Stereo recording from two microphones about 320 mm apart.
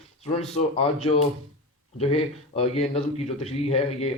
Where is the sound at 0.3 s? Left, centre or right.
Centre.